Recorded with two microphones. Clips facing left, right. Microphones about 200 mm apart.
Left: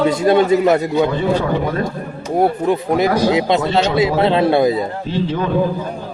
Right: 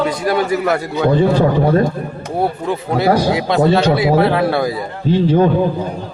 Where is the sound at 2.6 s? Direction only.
15° left (ahead or behind).